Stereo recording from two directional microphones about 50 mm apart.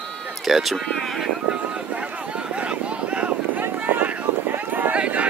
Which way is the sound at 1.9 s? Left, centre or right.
Right.